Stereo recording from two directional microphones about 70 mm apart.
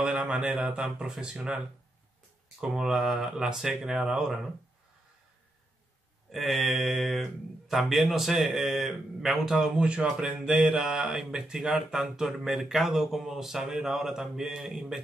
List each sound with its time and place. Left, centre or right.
0.0 s speech: centre
2.6 s speech: centre
6.3 s speech: centre